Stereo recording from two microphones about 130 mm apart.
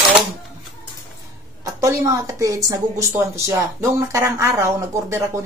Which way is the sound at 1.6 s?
25° right (ahead or behind).